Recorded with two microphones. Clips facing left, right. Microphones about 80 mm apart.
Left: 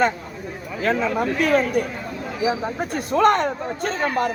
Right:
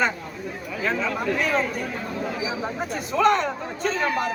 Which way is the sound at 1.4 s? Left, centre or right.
Left.